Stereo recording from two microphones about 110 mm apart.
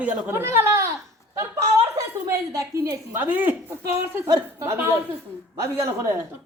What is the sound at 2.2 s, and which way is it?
A woman's voice, 30° right (ahead or behind).